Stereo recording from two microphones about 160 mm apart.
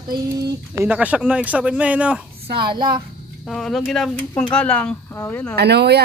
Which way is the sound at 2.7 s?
30° right (ahead or behind).